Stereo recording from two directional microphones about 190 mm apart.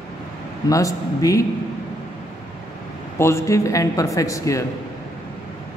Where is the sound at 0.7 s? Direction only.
15° left (ahead or behind).